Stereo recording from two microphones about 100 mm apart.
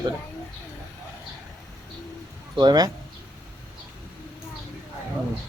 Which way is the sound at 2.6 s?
45° right (ahead or behind).